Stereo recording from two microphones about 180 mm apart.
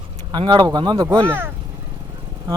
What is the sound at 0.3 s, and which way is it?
Speech, 25° right (ahead or behind).